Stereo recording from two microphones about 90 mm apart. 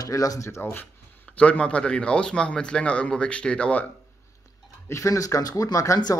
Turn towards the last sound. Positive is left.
turn(degrees=40)  # may be behind; listen again after turning